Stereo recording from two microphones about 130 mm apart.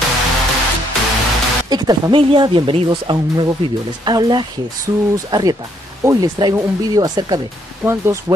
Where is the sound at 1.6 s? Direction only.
30° right (ahead or behind).